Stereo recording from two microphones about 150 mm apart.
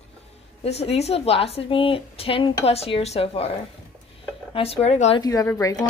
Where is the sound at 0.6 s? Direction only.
45° left (ahead or behind).